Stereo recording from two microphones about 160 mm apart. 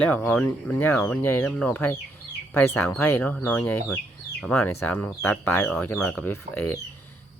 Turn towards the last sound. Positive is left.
turn(degrees=10)  # may be behind; listen again after turning